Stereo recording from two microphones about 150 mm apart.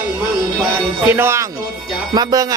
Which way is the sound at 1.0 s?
15° right (ahead or behind).